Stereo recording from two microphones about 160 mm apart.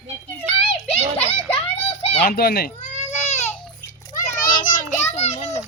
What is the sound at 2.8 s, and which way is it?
Baby cry, 45° left (ahead or behind).